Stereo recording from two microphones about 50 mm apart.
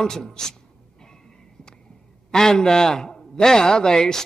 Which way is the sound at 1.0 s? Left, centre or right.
Centre.